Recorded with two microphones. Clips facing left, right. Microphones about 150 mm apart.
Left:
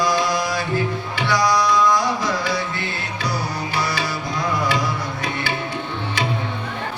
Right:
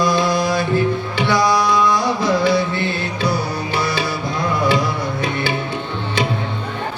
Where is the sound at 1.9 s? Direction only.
25° right (ahead or behind).